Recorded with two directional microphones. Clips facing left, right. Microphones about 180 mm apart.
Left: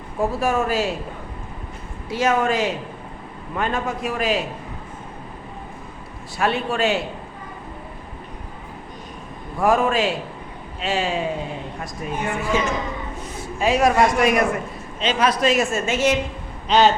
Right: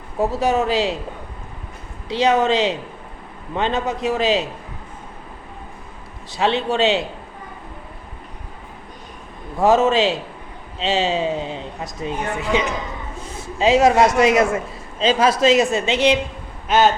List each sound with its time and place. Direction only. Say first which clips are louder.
0.2 s a man's voice: right 2 dB; 20° right (ahead or behind)
2.0 s a man's voice: right 3 dB; 20° right (ahead or behind)
6.4 s a man's voice: right 3 dB; 25° right (ahead or behind)
9.6 s a man's voice: right 3 dB; 25° right (ahead or behind)
16.6 s speech: even; centre (ahead or behind)